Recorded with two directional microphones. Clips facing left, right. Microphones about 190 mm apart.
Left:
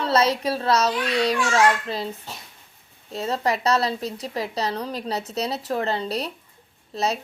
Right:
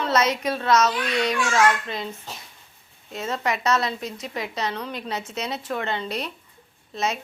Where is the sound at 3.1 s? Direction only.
35° left (ahead or behind).